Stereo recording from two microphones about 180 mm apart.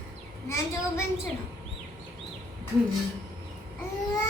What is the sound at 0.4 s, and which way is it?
Speech, 15° left (ahead or behind).